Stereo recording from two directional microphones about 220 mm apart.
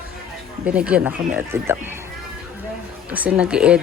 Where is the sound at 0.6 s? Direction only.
5° right (ahead or behind).